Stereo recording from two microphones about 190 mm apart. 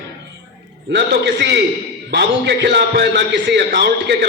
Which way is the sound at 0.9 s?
65° right (ahead or behind).